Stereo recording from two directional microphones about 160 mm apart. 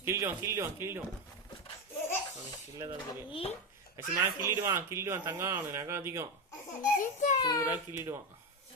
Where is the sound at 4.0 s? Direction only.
15° right (ahead or behind).